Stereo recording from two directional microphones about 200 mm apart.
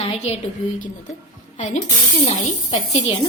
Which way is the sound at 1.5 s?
35° left (ahead or behind).